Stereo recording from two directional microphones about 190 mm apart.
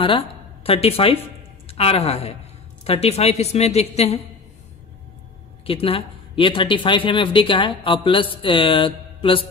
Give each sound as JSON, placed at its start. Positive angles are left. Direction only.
{"t": 0.7, "sound": "a woman's voice", "side_deg": 30}
{"t": 5.7, "sound": "speech", "side_deg": 30}